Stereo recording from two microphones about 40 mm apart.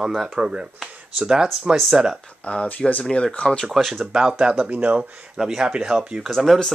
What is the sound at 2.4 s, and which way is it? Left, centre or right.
Speech, left.